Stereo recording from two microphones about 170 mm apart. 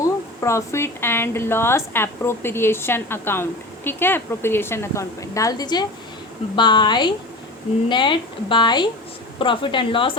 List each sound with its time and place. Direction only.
0.0 s speech: 15° left (ahead or behind)